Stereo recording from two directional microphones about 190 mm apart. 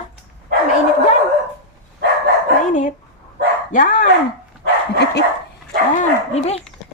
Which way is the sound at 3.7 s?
45° left (ahead or behind).